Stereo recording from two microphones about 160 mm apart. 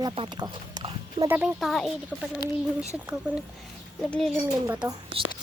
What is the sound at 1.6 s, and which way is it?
Speech, centre (ahead or behind).